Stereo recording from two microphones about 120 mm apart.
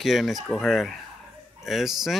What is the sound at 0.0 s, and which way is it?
Speech, centre (ahead or behind).